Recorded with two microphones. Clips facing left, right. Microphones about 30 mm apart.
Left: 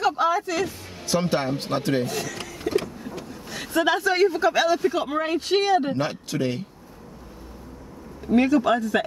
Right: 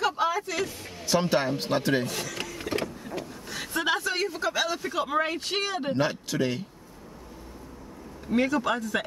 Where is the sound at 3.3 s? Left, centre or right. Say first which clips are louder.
Left 9 dB; centre.